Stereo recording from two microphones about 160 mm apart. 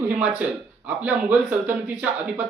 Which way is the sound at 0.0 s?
10° right (ahead or behind).